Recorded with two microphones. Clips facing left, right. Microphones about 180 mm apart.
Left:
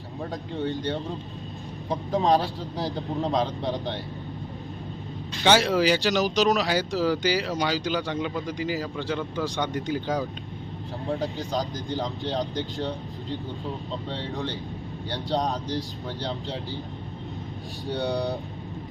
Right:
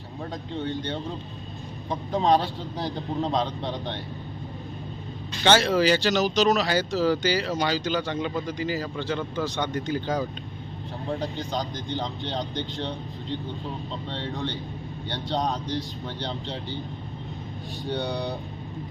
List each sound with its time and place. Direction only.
0.5 s a man's voice: centre (ahead or behind)
2.1 s a man's voice: centre (ahead or behind)
5.5 s a man's voice: 10° left (ahead or behind)
14.1 s a man's voice: centre (ahead or behind)
17.9 s a man's voice: centre (ahead or behind)